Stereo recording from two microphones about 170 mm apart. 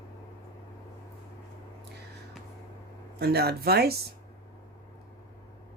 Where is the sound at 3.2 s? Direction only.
70° right (ahead or behind).